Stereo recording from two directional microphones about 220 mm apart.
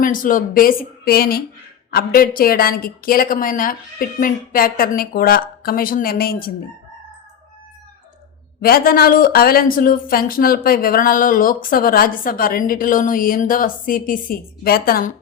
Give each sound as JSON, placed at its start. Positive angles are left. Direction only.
{"t": 0.0, "sound": "a woman's voice", "side_deg": 40}
{"t": 8.6, "sound": "a woman's voice", "side_deg": 40}